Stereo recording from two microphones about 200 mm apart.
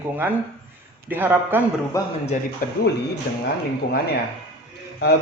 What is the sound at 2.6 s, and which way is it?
Speech, 45° left (ahead or behind).